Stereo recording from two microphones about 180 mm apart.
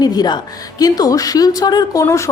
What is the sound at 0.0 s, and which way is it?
A woman's voice, 20° left (ahead or behind).